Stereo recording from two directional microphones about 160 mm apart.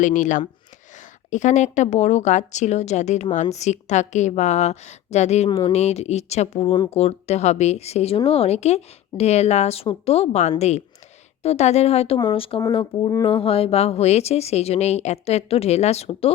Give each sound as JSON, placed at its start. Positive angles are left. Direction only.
{"t": 0.0, "sound": "a woman's voice", "side_deg": 50}
{"t": 5.5, "sound": "speech", "side_deg": 25}
{"t": 5.7, "sound": "a woman's voice", "side_deg": 40}
{"t": 13.2, "sound": "speech", "side_deg": 35}